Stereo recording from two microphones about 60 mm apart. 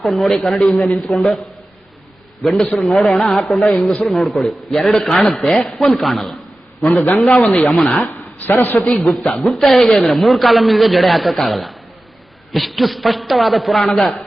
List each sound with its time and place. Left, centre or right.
0.0 s a man's voice: centre
2.4 s a man's voice: centre
8.0 s speech: left
8.8 s a man's voice: centre